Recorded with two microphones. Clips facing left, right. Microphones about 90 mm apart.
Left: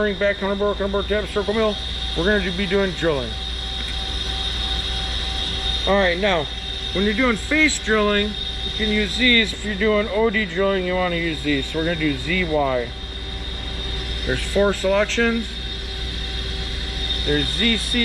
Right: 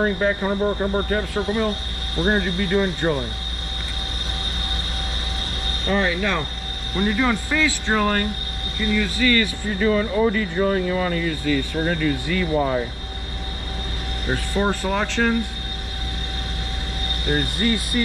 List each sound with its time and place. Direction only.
0.0 s speech: 20° right (ahead or behind)
0.8 s speech: centre (ahead or behind)
5.7 s speech: 5° right (ahead or behind)
9.2 s speech: 15° right (ahead or behind)
14.3 s speech: 10° right (ahead or behind)
17.3 s speech: 5° right (ahead or behind)
17.9 s speech: 20° right (ahead or behind)